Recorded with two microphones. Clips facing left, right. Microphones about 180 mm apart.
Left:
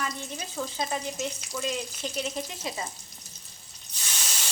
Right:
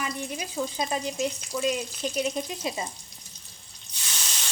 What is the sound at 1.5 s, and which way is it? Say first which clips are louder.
Speech: right 5 dB; 15° right (ahead or behind).